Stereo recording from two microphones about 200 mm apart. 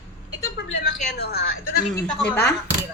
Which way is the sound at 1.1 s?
50° left (ahead or behind).